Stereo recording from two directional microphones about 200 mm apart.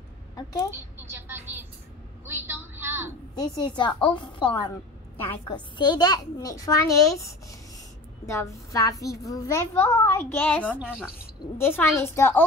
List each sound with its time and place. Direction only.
0.7 s speech: 10° right (ahead or behind)
3.3 s a woman's voice: 20° left (ahead or behind); by 11.1 s centre (ahead or behind)
11.5 s a child's voice: 10° left (ahead or behind)